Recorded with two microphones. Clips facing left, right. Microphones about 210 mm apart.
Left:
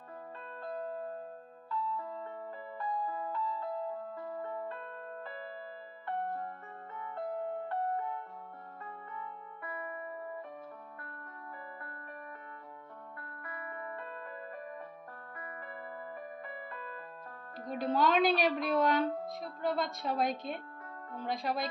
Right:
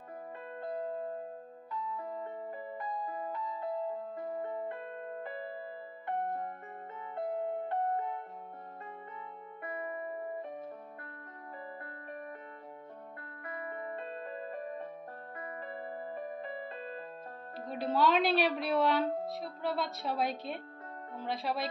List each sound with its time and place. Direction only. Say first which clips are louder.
0.6 s music: right 2 dB; 20° right (ahead or behind)
9.6 s music: right 4 dB; 20° right (ahead or behind)
13.2 s music: right 4 dB; 20° right (ahead or behind)
17.9 s a woman's voice: even; centre (ahead or behind)